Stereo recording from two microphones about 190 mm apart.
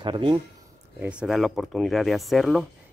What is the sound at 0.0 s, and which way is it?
Speech, 25° right (ahead or behind).